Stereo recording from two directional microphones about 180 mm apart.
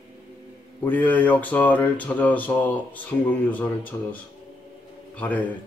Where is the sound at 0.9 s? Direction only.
10° left (ahead or behind).